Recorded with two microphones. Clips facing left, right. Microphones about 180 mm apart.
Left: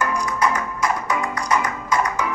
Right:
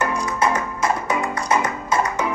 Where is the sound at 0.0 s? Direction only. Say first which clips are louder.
Right 1 dB; 25° right (ahead or behind).